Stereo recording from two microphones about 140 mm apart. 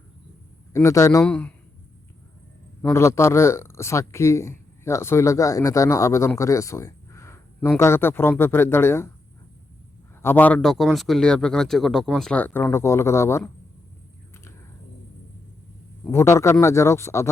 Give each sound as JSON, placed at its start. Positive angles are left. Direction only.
{"t": 0.7, "sound": "speech", "side_deg": 20}
{"t": 1.2, "sound": "speech", "side_deg": 10}
{"t": 2.9, "sound": "speech", "side_deg": 20}
{"t": 10.2, "sound": "a man's voice", "side_deg": 15}
{"t": 16.0, "sound": "speech", "side_deg": 20}